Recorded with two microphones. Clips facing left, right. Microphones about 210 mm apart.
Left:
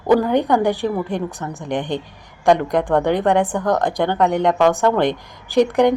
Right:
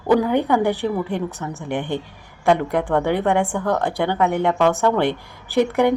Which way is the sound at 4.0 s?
10° right (ahead or behind).